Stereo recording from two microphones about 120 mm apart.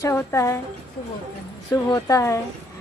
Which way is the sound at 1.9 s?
25° left (ahead or behind).